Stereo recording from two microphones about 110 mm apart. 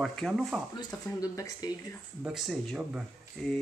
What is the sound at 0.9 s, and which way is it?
Speech, 35° left (ahead or behind).